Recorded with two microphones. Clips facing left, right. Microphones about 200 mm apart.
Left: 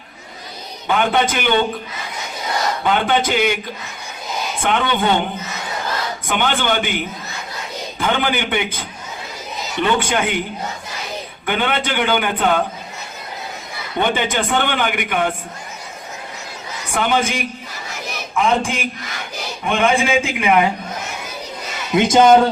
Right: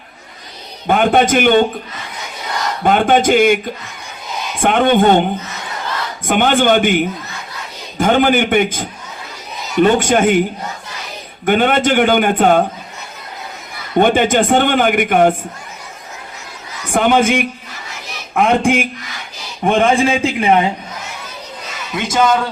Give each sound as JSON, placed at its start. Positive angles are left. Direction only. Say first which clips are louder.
{"t": 0.9, "sound": "speech", "louder": "right 5 dB", "side_deg": -50}
{"t": 2.8, "sound": "speech", "louder": "right 7 dB", "side_deg": -50}
{"t": 4.6, "sound": "speech", "louder": "right 8 dB", "side_deg": -50}
{"t": 6.2, "sound": "speech", "louder": "right 8 dB", "side_deg": -50}
{"t": 11.4, "sound": "speech", "louder": "right 8 dB", "side_deg": -50}
{"t": 13.9, "sound": "speech", "louder": "right 7 dB", "side_deg": -50}
{"t": 16.9, "sound": "speech", "louder": "right 6 dB", "side_deg": -50}
{"t": 19.6, "sound": "speech", "louder": "right 4 dB", "side_deg": -45}
{"t": 21.9, "sound": "a man's voice", "louder": "left 4 dB", "side_deg": 20}